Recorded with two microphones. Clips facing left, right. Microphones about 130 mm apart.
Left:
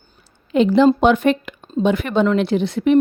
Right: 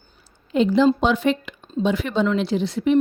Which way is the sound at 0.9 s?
55° left (ahead or behind).